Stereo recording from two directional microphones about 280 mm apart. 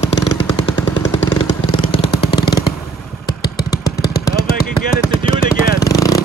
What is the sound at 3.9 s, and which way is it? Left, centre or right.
Vehicle, left.